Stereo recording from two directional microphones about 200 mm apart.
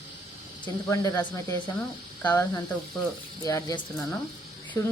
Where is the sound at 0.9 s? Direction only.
15° left (ahead or behind).